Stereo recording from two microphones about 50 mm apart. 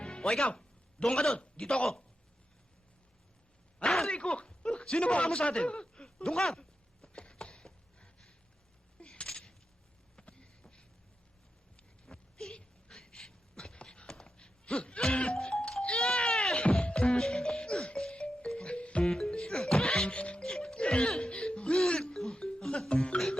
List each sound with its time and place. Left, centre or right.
0.0 s music: centre
0.4 s speech: left
3.8 s a sound: centre
4.1 s speech: left
6.3 s chopping: centre
9.2 s a sound: centre
12.0 s a sound: centre
16.8 s music: left
19.0 s music: centre; by 20.4 s left
20.4 s music: centre